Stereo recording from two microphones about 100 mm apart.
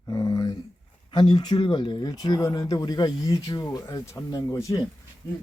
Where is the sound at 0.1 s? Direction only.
35° left (ahead or behind).